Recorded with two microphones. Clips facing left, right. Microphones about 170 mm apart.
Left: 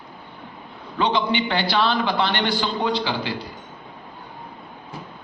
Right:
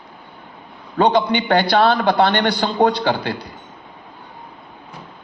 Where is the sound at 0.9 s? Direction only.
50° right (ahead or behind).